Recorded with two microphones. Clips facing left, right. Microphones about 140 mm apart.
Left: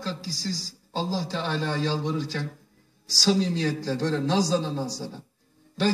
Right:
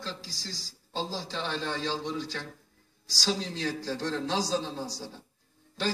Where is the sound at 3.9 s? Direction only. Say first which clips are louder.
Left 6 dB; 50° left (ahead or behind).